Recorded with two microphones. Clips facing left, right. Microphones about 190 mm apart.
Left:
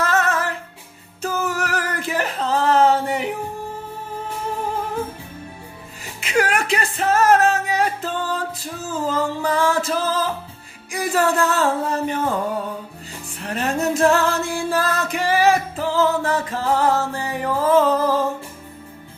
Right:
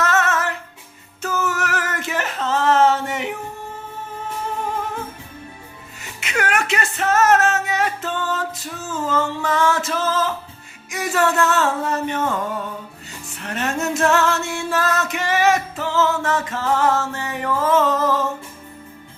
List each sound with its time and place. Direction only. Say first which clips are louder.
0.0 s music: even; 35° left (ahead or behind)
1.2 s a sound: even; 35° left (ahead or behind)
6.1 s music: left 2 dB; 30° left (ahead or behind)